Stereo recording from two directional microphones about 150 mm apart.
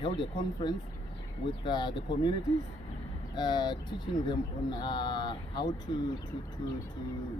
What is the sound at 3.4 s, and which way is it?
Speech, 30° left (ahead or behind).